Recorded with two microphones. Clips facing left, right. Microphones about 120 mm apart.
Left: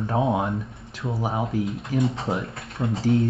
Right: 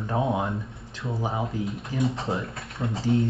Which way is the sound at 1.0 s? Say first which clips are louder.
Left 2 dB; 25° left (ahead or behind).